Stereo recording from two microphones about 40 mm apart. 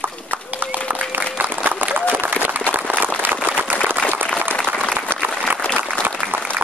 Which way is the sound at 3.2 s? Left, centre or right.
Right.